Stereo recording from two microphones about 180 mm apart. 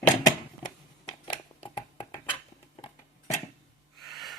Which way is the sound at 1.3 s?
25° left (ahead or behind).